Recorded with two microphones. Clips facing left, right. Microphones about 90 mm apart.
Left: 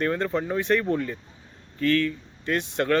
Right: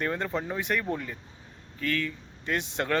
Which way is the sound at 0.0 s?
10° right (ahead or behind).